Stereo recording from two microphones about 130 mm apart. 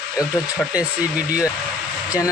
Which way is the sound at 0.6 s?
10° left (ahead or behind).